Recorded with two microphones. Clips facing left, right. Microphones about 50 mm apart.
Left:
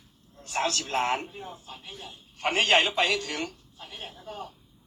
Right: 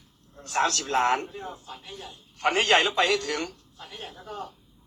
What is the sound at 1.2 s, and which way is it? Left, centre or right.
Speech, centre.